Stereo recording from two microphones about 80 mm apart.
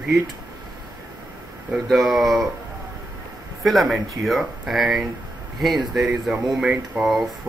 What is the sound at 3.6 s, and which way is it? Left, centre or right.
Speech, centre.